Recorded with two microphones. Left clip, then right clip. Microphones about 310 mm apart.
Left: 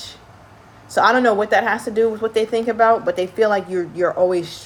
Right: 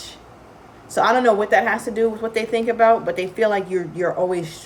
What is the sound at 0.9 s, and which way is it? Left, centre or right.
Speech, centre.